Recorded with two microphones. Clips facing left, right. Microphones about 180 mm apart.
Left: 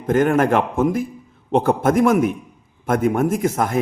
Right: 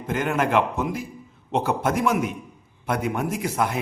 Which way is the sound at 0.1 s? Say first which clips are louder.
Left 7 dB; 45° left (ahead or behind).